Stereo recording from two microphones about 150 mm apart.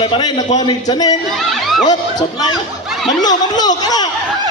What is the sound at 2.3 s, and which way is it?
A man's voice, 25° left (ahead or behind).